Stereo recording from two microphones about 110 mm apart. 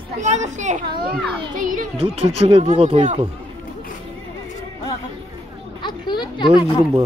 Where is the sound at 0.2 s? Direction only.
90° right.